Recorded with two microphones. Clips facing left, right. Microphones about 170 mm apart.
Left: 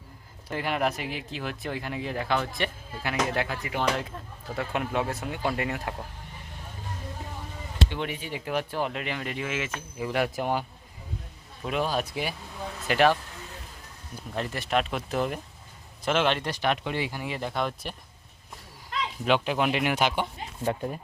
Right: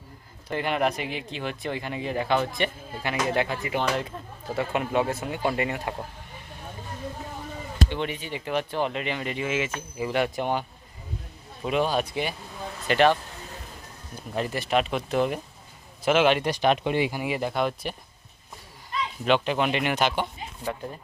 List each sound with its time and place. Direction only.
0.4 s speech: 5° left (ahead or behind)
7.9 s speech: 5° left (ahead or behind)
14.3 s speech: 5° right (ahead or behind)
19.2 s speech: 5° left (ahead or behind)
20.7 s speech: 20° left (ahead or behind)